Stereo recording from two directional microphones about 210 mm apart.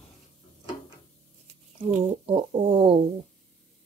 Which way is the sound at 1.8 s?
25° right (ahead or behind).